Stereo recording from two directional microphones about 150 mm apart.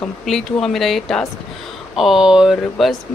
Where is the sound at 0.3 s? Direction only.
5° left (ahead or behind).